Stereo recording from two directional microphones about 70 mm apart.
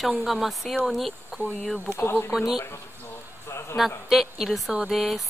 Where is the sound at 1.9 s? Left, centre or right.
Left.